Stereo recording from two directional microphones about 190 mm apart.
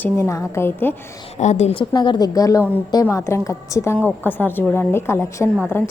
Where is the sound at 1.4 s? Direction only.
35° left (ahead or behind).